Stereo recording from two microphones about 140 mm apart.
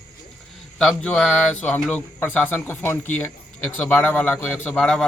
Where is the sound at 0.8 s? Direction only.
5° left (ahead or behind).